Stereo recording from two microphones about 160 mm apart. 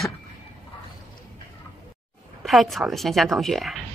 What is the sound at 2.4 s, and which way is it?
A woman's voice, centre (ahead or behind).